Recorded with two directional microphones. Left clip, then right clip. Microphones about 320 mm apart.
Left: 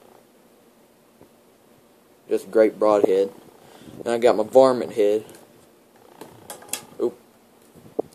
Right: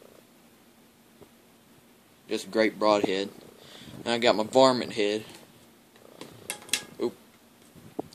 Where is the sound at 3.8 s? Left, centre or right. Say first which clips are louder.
Left 7 dB; centre.